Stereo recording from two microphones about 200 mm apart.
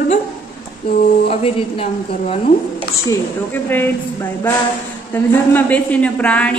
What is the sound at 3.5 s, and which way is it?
Speech, 10° left (ahead or behind).